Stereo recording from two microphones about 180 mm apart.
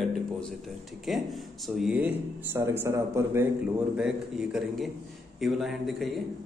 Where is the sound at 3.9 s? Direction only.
5° right (ahead or behind).